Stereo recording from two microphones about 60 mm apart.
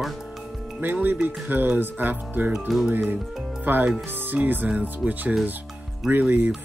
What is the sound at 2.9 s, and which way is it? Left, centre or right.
Speech, right.